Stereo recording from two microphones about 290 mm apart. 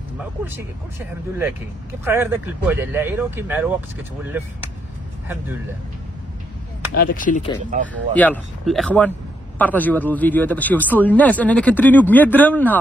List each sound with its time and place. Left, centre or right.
0.2 s speech: centre
6.9 s speech: left
8.1 s speech: centre